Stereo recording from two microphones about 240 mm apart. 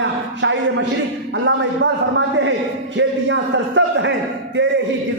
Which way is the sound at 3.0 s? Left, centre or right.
Right.